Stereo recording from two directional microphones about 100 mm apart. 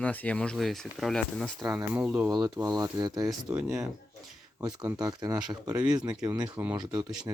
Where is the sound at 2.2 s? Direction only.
40° right (ahead or behind).